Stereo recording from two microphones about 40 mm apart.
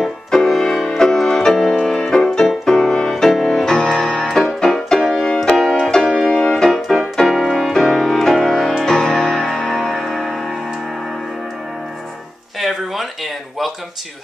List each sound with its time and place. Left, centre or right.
0.5 s music: centre
5.5 s music: centre
6.3 s keyboard: left
6.6 s keyboard: centre
8.8 s music: centre
12.5 s a sound: centre